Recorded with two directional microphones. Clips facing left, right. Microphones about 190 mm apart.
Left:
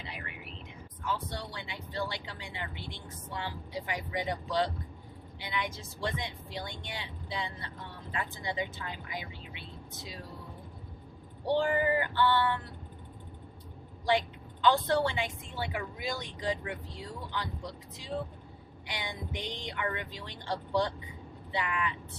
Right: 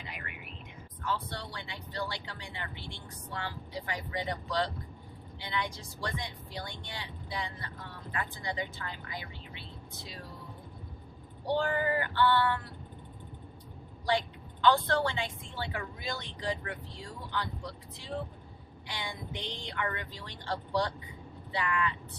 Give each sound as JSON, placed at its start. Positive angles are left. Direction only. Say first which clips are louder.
{"t": 0.1, "sound": "a sound", "louder": "left 1 dB", "side_deg": 30}
{"t": 1.0, "sound": "speech", "louder": "even", "side_deg": 15}
{"t": 11.5, "sound": "speech", "louder": "left 2 dB", "side_deg": 15}
{"t": 14.1, "sound": "speech", "louder": "left 2 dB", "side_deg": 15}